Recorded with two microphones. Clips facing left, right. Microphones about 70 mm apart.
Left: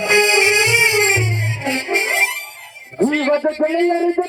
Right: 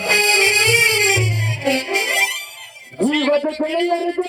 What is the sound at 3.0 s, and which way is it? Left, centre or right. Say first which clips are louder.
Speech: left 1 dB; left.